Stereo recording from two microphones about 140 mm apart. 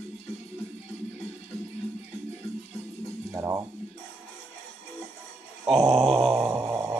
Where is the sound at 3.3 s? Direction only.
20° right (ahead or behind).